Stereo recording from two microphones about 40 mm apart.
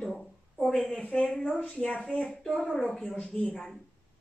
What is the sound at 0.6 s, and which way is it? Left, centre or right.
Speech, centre.